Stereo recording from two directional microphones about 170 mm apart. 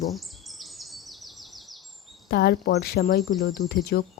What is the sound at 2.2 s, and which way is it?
Speech, 70° left (ahead or behind).